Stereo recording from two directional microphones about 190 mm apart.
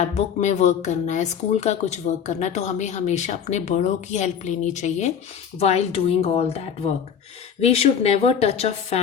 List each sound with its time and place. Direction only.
0.0 s speech: 35° left (ahead or behind)